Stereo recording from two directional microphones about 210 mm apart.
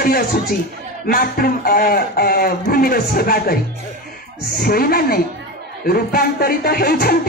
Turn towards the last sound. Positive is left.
turn(degrees=45)  # may be behind; listen again after turning